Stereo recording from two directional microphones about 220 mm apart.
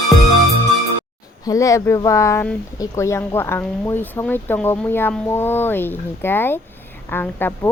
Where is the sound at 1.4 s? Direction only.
15° left (ahead or behind).